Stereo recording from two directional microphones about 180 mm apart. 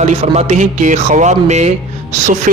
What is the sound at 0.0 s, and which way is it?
Speech, 40° right (ahead or behind).